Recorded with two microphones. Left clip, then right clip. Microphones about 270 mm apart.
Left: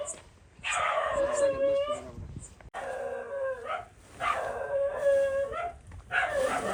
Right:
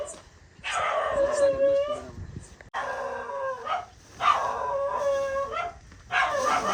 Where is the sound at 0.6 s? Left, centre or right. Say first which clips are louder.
Right 2 dB; right.